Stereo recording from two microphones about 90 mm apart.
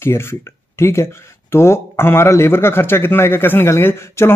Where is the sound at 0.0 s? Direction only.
25° left (ahead or behind).